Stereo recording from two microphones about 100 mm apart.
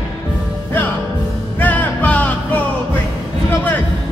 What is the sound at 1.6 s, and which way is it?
Music, 15° left (ahead or behind).